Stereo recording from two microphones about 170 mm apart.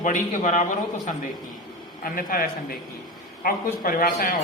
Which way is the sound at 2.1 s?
60° left (ahead or behind).